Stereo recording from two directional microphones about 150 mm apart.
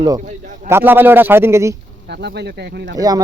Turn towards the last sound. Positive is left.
turn(degrees=-25)  # may be behind; listen again after turning